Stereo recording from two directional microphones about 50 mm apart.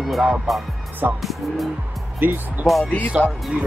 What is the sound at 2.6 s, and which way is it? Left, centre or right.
Speech, centre.